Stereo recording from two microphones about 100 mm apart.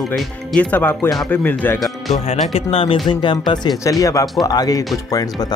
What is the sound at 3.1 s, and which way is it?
Speech, 55° left (ahead or behind).